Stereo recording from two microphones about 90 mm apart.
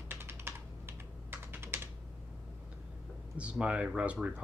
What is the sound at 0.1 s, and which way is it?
Computer keyboard, 25° right (ahead or behind).